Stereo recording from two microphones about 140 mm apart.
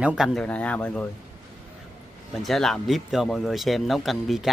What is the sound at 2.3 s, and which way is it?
Speech, centre (ahead or behind).